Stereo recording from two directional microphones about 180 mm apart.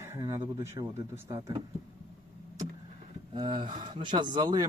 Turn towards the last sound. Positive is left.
turn(degrees=-25)  # may be behind; listen again after turning